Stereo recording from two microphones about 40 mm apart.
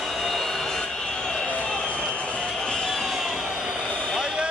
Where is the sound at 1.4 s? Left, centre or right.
Left.